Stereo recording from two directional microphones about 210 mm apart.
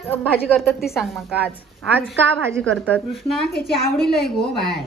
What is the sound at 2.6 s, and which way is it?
Speech, centre (ahead or behind).